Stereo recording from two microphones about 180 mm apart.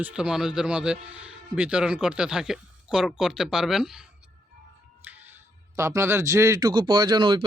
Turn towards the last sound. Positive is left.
turn(degrees=-25)  # may be behind; listen again after turning